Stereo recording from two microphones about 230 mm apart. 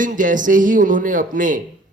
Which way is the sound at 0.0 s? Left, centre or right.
Right.